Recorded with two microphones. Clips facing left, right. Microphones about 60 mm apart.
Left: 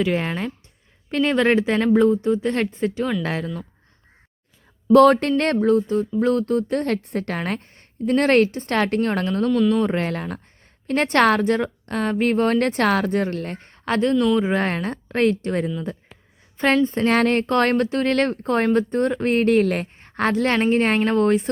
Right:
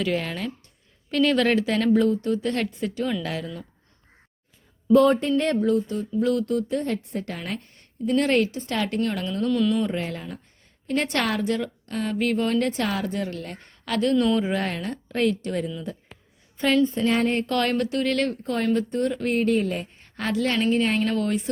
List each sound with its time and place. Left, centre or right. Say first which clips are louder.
0.0 s speech: left 4 dB; left
4.9 s speech: left 5 dB; left
5.4 s a woman's voice: left 4 dB; left
6.7 s a woman's voice: left 4 dB; left
7.6 s a woman's voice: left 3 dB; left
9.5 s speech: left 3 dB; centre
9.8 s a woman's voice: left 5 dB; left
10.8 s a woman's voice: left 7 dB; left
14.2 s speech: left 2 dB; centre
14.4 s a woman's voice: left 4 dB; left
17.2 s speech: left 6 dB; left
17.4 s a woman's voice: left 5 dB; left
20.0 s a woman's voice: left 4 dB; left